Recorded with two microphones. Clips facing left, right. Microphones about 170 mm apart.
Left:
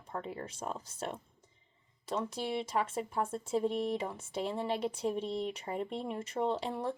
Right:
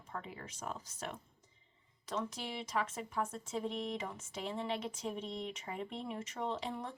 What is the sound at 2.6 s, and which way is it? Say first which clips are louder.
Speech: left 4 dB; 30° left (ahead or behind).